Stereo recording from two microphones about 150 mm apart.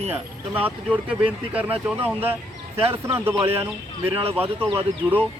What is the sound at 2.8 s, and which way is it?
Speech, 40° right (ahead or behind).